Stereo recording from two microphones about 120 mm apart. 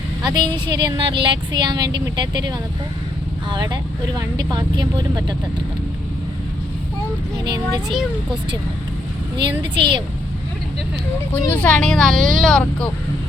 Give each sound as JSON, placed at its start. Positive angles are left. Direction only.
{"t": 0.2, "sound": "speech", "side_deg": -40}
{"t": 7.4, "sound": "speech", "side_deg": -35}
{"t": 9.4, "sound": "speech", "side_deg": -40}
{"t": 11.5, "sound": "speech", "side_deg": 10}